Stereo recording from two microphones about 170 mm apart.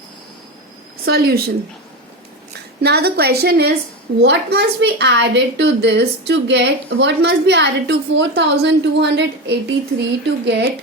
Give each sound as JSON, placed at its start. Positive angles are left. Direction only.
{"t": 1.0, "sound": "a woman's voice", "side_deg": -65}
{"t": 2.8, "sound": "a woman's voice", "side_deg": -70}